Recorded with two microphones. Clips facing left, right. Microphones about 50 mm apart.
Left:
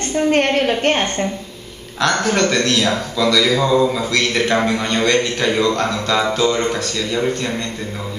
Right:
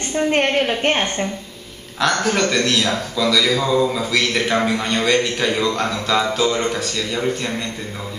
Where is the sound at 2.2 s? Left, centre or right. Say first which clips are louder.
Left 2 dB; centre.